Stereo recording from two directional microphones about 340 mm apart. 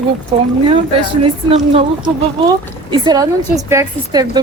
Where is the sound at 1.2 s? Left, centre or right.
Centre.